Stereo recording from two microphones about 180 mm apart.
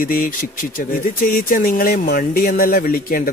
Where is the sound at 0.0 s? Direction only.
50° left (ahead or behind).